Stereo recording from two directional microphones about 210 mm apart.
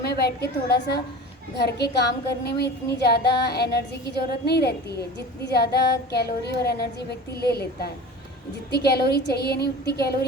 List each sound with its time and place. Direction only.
0.0 s a woman's voice: 50° left (ahead or behind)